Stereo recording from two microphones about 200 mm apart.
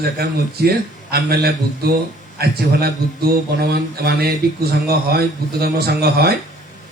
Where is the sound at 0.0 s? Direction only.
50° right (ahead or behind).